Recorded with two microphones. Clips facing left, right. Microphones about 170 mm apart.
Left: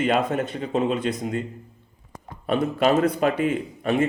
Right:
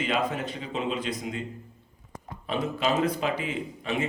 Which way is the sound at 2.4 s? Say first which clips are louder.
Left 7 dB; 55° left (ahead or behind).